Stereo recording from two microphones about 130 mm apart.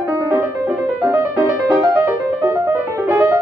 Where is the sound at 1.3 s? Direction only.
25° right (ahead or behind).